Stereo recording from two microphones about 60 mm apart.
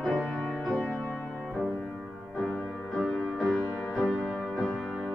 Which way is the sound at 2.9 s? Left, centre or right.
Centre.